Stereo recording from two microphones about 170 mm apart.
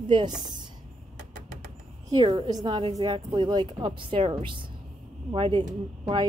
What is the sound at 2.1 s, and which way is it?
A woman's voice, 30° right (ahead or behind).